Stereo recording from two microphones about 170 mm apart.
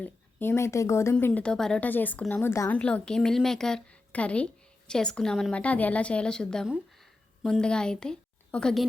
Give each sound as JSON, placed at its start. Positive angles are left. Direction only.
{"t": 0.0, "sound": "a woman's voice", "side_deg": 10}